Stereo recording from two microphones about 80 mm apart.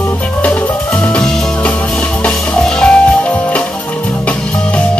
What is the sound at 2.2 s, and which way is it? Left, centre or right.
Music, centre.